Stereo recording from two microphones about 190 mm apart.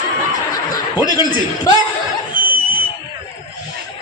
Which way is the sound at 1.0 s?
20° left (ahead or behind).